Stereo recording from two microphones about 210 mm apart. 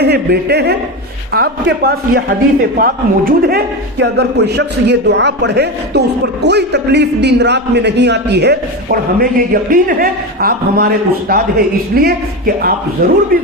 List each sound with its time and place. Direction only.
0.0 s speech: 50° right (ahead or behind)